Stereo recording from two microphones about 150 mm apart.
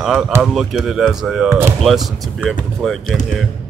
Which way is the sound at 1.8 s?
Centre (ahead or behind).